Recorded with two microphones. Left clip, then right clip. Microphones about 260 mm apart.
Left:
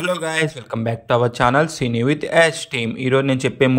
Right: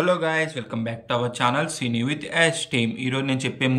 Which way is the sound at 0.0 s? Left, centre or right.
Centre.